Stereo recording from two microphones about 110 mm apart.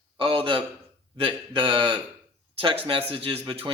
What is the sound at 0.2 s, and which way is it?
A man's voice, 50° right (ahead or behind).